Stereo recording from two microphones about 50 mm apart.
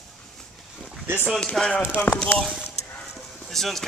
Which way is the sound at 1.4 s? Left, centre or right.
Centre.